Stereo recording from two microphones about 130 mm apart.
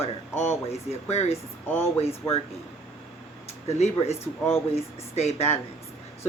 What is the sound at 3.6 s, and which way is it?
Speech, 55° left (ahead or behind).